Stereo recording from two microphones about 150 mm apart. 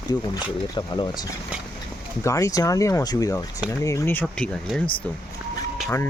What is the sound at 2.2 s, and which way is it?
Speech, 20° left (ahead or behind).